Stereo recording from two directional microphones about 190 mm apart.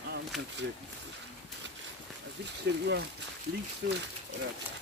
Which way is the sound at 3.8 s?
65° right (ahead or behind).